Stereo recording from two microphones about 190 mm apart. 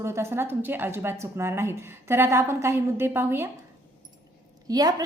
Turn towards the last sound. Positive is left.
turn(degrees=-20)  # may be behind; listen again after turning